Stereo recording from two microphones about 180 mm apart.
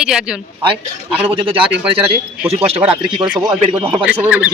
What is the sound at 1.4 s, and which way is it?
Speech, 30° right (ahead or behind).